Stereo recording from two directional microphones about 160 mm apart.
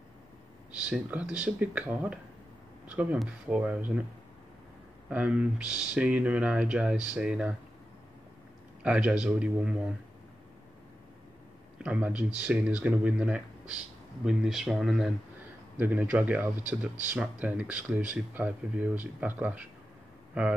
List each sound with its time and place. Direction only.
0.7 s speech: 5° right (ahead or behind)
5.1 s speech: 5° right (ahead or behind)
8.8 s speech: 5° right (ahead or behind)
11.8 s speech: 10° right (ahead or behind)